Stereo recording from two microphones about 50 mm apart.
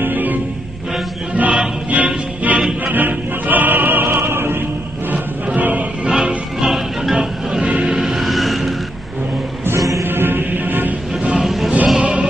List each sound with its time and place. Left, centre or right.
0.0 s music: right
5.1 s music: right
6.0 s music: centre
7.6 s music: right
7.9 s a sound: centre
9.8 s music: right
10.0 s music: right
11.3 s music: centre
12.0 s music: right